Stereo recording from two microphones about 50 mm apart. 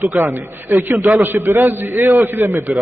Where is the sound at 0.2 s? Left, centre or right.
Right.